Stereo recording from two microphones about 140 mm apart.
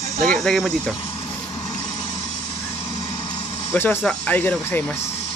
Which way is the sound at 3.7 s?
15° left (ahead or behind).